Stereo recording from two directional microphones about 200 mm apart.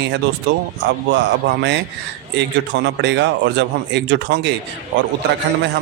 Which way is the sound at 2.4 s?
60° right (ahead or behind).